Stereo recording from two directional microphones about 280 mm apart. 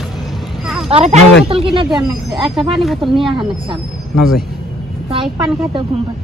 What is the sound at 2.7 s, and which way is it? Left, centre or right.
Speech, centre.